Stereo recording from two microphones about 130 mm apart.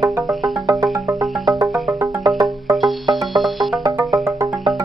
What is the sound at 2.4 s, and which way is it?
Music, centre (ahead or behind).